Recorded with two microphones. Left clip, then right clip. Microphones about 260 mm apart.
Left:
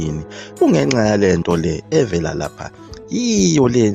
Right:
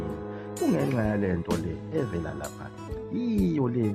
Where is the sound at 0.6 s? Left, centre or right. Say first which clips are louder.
Left 12 dB; left.